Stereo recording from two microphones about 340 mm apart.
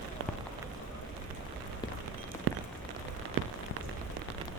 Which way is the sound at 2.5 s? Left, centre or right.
Right.